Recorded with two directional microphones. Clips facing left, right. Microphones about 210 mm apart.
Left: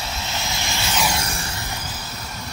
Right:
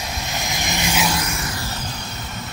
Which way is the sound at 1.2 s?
30° left (ahead or behind).